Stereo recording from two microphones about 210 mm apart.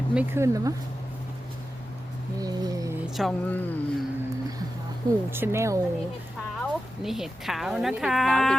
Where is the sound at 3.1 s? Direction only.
Centre (ahead or behind).